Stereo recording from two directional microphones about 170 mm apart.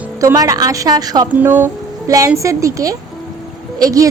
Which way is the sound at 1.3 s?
10° right (ahead or behind).